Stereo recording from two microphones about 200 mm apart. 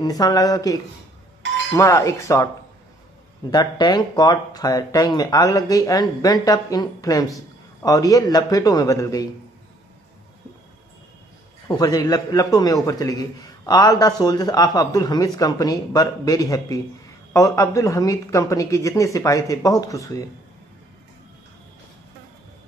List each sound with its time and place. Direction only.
0.0 s speech: 20° left (ahead or behind)
11.6 s speech: 20° left (ahead or behind)